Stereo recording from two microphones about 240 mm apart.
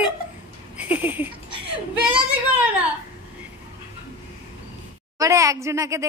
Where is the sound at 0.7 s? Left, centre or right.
Centre.